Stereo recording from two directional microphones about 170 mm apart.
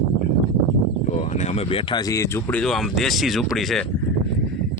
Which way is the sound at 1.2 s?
40° left (ahead or behind).